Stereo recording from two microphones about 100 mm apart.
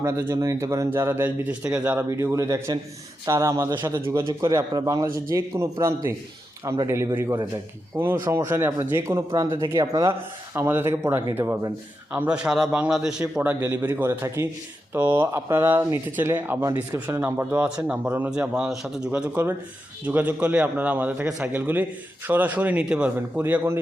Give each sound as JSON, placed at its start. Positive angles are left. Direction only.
{"t": 0.0, "sound": "speech", "side_deg": -30}
{"t": 2.0, "sound": "a man's voice", "side_deg": -30}
{"t": 5.0, "sound": "speech", "side_deg": -25}
{"t": 13.4, "sound": "speech", "side_deg": -20}